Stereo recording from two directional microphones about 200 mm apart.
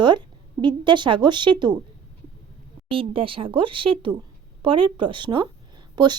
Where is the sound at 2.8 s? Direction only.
25° right (ahead or behind).